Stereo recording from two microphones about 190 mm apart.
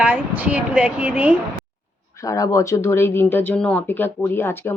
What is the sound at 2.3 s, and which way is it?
Speech, 15° left (ahead or behind).